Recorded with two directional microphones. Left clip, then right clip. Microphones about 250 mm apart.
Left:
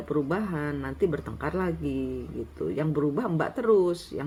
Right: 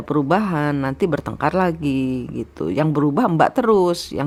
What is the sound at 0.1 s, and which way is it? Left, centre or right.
Speech, right.